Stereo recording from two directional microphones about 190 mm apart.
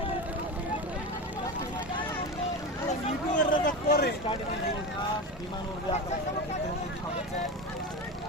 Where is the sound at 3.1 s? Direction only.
45° left (ahead or behind).